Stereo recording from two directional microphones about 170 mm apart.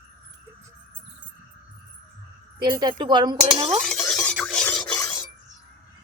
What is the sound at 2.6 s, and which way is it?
A woman's voice, 25° right (ahead or behind).